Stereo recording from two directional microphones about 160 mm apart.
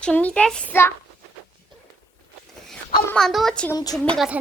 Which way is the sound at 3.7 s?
25° left (ahead or behind).